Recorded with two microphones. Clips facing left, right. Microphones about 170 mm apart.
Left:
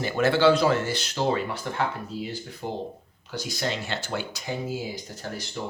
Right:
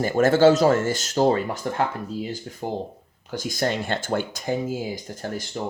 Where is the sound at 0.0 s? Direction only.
45° right (ahead or behind).